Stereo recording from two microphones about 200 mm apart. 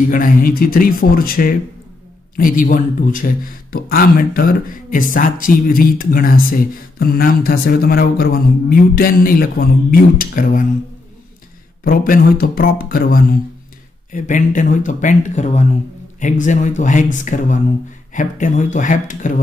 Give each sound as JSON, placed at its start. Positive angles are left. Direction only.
{"t": 0.0, "sound": "a man's voice", "side_deg": 45}
{"t": 11.8, "sound": "a man's voice", "side_deg": 45}